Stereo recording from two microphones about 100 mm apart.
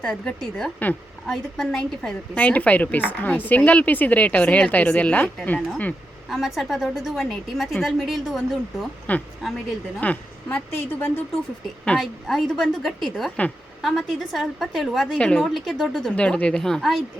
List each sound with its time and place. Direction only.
0.0 s speech: 10° left (ahead or behind)
6.2 s a woman's voice: centre (ahead or behind)
9.1 s speech: 15° left (ahead or behind)
11.9 s a woman's voice: centre (ahead or behind)